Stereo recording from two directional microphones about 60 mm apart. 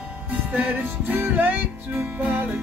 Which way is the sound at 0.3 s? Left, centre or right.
Right.